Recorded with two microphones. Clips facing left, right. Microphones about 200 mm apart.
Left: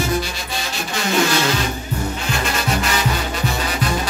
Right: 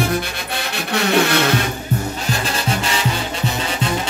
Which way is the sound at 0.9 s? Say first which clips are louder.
Right 2 dB; 60° right (ahead or behind).